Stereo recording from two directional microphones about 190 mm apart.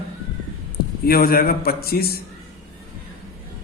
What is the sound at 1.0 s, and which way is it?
Speech, 50° left (ahead or behind).